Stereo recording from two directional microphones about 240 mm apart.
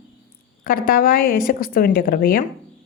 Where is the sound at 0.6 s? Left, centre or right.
Left.